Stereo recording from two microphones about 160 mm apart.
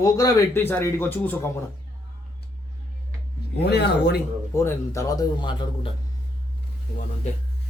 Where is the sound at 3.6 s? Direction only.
90° left.